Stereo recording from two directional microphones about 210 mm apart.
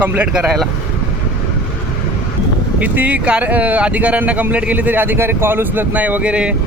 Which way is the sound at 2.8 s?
5° right (ahead or behind).